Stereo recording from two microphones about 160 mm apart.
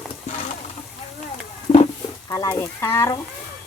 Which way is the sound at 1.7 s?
50° left (ahead or behind).